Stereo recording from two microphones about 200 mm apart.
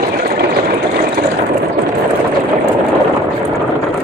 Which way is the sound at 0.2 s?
50° right (ahead or behind).